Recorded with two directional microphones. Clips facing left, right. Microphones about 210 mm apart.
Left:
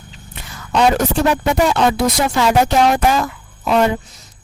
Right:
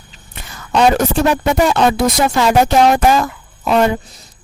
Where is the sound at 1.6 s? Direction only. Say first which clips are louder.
Right 2 dB; 45° right (ahead or behind).